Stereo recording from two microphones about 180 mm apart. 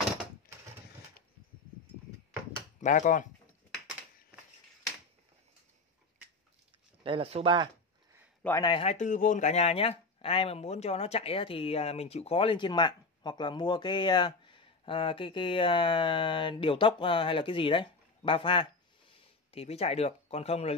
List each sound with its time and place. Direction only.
2.8 s speech: 45° left (ahead or behind)
7.0 s a sound: 30° right (ahead or behind)
8.5 s speech: 20° left (ahead or behind)
8.9 s speech: 45° left (ahead or behind)